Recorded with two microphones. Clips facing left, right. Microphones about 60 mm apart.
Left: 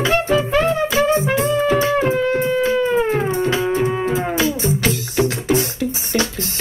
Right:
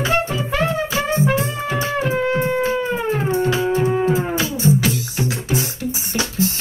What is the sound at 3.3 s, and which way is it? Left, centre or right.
Music, left.